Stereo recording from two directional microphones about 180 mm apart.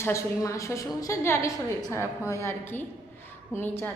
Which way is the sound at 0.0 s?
15° left (ahead or behind).